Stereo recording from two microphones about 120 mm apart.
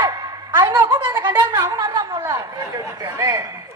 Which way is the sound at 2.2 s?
20° right (ahead or behind).